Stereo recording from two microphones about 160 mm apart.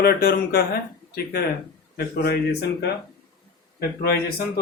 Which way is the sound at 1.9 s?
85° left.